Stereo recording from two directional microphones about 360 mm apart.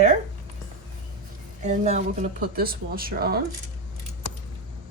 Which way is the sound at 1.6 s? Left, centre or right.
Centre.